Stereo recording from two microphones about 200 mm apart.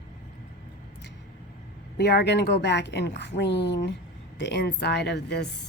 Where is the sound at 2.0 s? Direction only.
55° left (ahead or behind).